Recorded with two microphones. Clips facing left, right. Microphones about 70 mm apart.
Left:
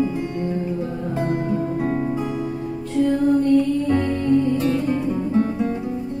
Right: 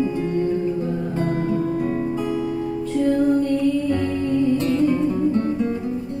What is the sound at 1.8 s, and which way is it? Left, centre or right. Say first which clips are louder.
Music: even; left.